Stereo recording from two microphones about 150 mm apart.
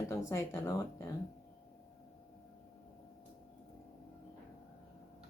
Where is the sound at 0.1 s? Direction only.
20° left (ahead or behind).